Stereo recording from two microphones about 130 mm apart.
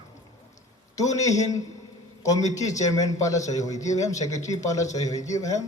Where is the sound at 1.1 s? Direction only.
25° left (ahead or behind).